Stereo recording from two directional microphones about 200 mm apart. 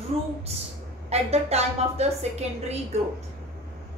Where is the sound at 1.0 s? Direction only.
30° right (ahead or behind).